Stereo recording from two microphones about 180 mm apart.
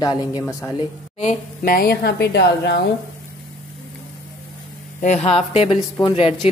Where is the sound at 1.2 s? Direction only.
55° left (ahead or behind); by 2.8 s 70° left (ahead or behind).